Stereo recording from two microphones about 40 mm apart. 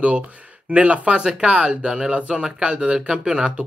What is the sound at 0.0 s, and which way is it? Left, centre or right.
Speech, right.